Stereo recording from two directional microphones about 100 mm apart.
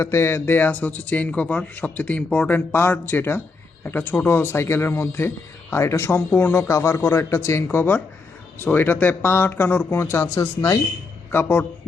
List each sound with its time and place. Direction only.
0.0 s a man's voice: 25° left (ahead or behind)
11.3 s a man's voice: 25° left (ahead or behind)